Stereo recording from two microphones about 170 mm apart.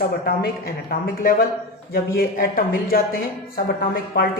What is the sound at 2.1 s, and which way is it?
Speech, 60° left (ahead or behind).